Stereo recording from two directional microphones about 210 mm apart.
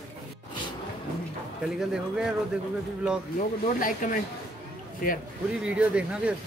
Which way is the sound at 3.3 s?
40° left (ahead or behind).